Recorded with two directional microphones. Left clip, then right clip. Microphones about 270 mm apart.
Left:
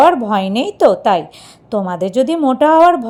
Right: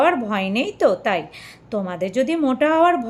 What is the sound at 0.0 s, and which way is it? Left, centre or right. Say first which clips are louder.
A woman's voice: left 8 dB; centre.